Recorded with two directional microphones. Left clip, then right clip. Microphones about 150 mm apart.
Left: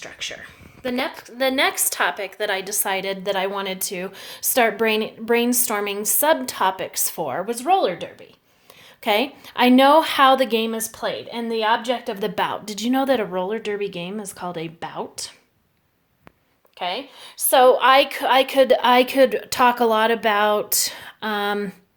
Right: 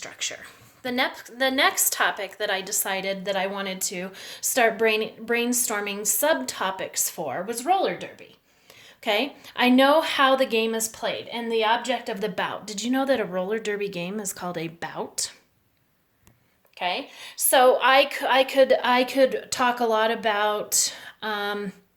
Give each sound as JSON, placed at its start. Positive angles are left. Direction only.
{"t": 0.0, "sound": "a woman's voice", "side_deg": 25}
{"t": 13.3, "sound": "speech", "side_deg": 10}
{"t": 16.7, "sound": "a woman's voice", "side_deg": 40}